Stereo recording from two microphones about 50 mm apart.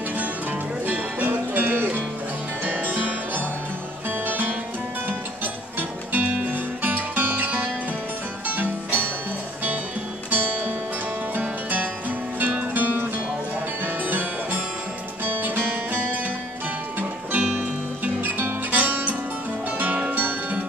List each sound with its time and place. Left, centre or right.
0.8 s music: right
10.3 s music: right
17.3 s music: right